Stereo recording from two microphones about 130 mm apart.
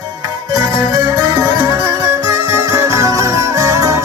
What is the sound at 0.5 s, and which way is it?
Music, 30° right (ahead or behind).